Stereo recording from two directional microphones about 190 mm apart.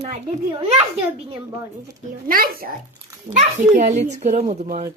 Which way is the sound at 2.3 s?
50° right (ahead or behind).